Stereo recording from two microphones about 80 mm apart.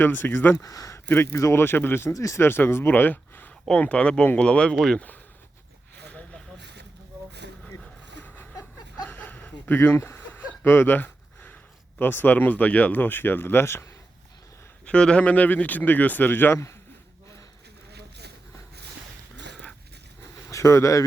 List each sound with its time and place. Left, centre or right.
0.0 s speech: left
0.6 s speech: left
1.0 s speech: left; by 5.0 s centre
6.1 s a sound: centre
9.0 s a sound: left
11.9 s speech: left
14.8 s speech: centre; by 16.7 s left
20.5 s speech: left